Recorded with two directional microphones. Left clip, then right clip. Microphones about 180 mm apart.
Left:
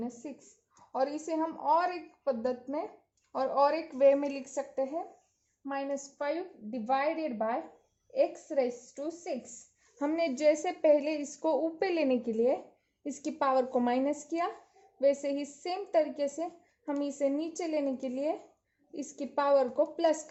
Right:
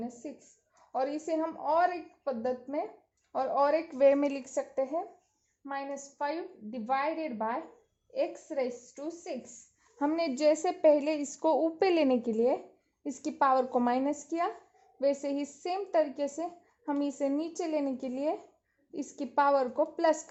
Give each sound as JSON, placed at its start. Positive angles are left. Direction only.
{"t": 0.9, "sound": "a woman's voice", "side_deg": -20}
{"t": 5.6, "sound": "a woman's voice", "side_deg": -20}
{"t": 10.0, "sound": "speech", "side_deg": -30}
{"t": 13.1, "sound": "a woman's voice", "side_deg": -25}